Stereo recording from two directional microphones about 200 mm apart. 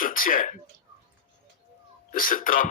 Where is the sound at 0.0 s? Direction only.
45° left (ahead or behind).